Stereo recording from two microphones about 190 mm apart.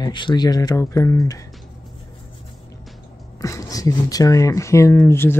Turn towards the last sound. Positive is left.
turn(degrees=10)  # may be behind; listen again after turning